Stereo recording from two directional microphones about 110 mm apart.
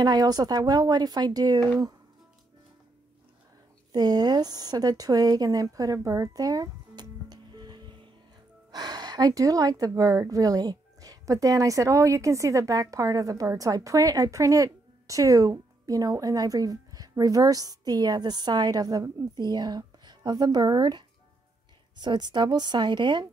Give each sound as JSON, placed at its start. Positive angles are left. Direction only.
{"t": 0.0, "sound": "a woman's voice", "side_deg": -35}
{"t": 3.9, "sound": "a woman's voice", "side_deg": -40}